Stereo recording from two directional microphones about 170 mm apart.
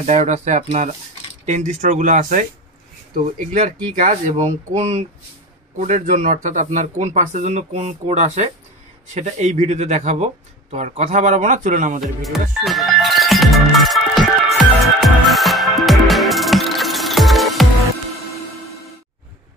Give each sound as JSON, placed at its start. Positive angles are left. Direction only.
{"t": 0.0, "sound": "speech", "side_deg": -45}
{"t": 12.0, "sound": "music", "side_deg": 0}